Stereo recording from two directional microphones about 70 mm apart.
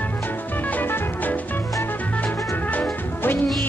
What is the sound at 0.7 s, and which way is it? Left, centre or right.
Music, left.